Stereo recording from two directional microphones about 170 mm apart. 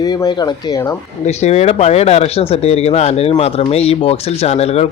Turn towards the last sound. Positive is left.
turn(degrees=40)  # may be behind; listen again after turning